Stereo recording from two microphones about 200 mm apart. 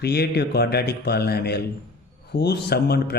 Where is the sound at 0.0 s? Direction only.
55° left (ahead or behind).